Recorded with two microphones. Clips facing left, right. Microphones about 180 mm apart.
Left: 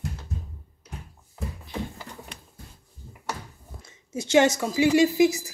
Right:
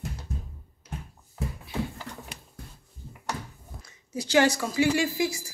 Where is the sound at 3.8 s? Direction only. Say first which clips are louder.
Left 1 dB; 25° left (ahead or behind).